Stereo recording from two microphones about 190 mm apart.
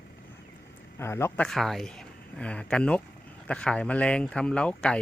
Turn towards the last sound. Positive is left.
turn(degrees=5)  # may be behind; listen again after turning